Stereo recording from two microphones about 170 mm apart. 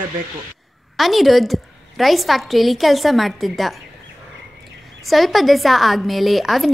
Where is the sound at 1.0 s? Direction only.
Centre (ahead or behind).